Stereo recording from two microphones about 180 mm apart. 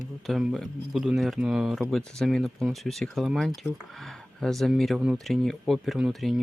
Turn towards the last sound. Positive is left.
turn(degrees=-5)  # may be behind; listen again after turning